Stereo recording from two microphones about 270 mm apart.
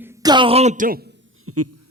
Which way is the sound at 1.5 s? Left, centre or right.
Right.